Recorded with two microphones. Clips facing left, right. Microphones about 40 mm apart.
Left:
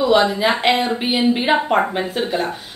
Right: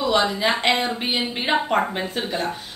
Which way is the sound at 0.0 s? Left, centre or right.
Centre.